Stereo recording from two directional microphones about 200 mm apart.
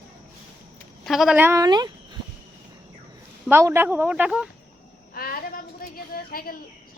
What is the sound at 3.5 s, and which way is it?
Speech, 10° right (ahead or behind).